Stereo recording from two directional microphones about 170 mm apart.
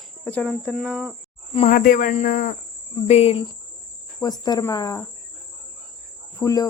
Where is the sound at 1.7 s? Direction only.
55° left (ahead or behind).